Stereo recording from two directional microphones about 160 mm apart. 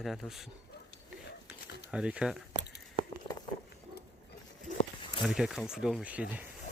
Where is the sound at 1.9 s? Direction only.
5° right (ahead or behind).